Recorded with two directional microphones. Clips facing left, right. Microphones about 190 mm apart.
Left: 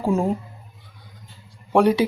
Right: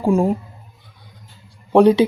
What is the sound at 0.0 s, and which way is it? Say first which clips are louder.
Speech: right 4 dB; 15° right (ahead or behind).